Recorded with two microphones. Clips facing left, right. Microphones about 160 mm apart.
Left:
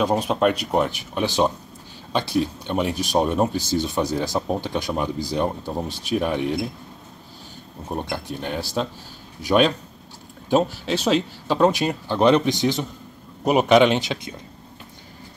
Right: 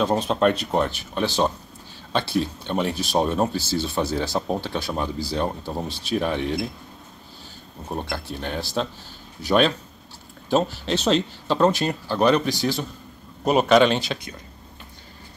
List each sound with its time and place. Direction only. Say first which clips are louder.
0.0 s speech: even; 10° left (ahead or behind)
7.9 s speech: left 2 dB; 15° left (ahead or behind)